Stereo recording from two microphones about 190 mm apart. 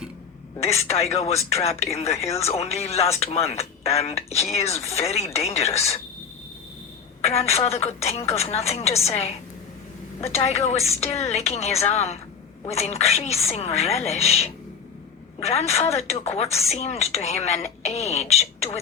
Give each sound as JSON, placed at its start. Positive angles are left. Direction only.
{"t": 0.6, "sound": "speech", "side_deg": 35}
{"t": 7.2, "sound": "speech", "side_deg": 35}
{"t": 10.3, "sound": "speech", "side_deg": 35}